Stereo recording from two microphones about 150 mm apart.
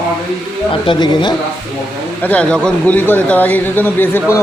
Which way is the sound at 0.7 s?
35° left (ahead or behind).